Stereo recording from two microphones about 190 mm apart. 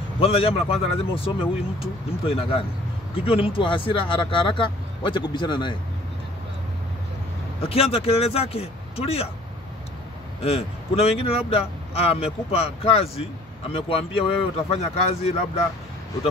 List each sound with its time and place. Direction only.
0.2 s speech: 30° left (ahead or behind)
7.6 s speech: 30° left (ahead or behind)
10.4 s speech: 30° left (ahead or behind)